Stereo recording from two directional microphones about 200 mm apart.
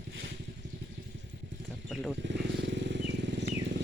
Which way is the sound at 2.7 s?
60° right (ahead or behind).